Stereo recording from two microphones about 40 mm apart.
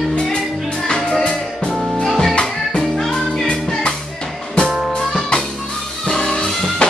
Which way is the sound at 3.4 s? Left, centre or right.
Left.